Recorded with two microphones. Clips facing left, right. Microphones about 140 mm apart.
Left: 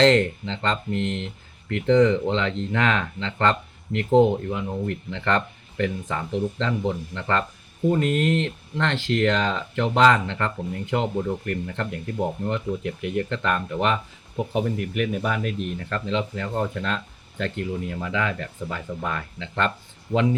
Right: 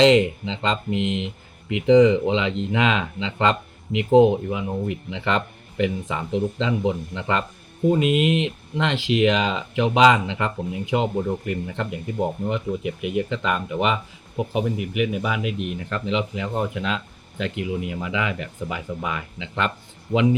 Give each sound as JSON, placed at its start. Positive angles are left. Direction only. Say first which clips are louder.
{"t": 0.0, "sound": "speech", "louder": "right 2 dB", "side_deg": -10}